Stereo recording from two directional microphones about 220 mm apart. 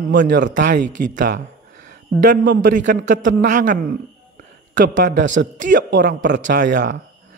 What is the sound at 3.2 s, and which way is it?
Speech, 35° right (ahead or behind).